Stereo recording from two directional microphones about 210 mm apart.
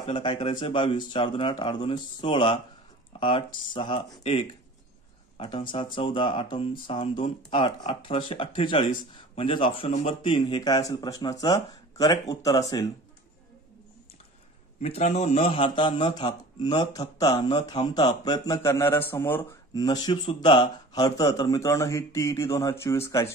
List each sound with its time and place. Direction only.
0.0 s speech: 25° left (ahead or behind)
5.7 s speech: 25° left (ahead or behind)
14.8 s a man's voice: 30° left (ahead or behind); by 23.2 s 15° left (ahead or behind)